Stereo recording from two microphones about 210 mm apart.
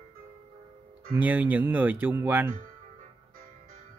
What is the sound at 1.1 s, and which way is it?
Speech, 5° right (ahead or behind).